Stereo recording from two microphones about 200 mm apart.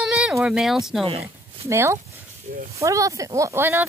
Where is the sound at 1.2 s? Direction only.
15° right (ahead or behind).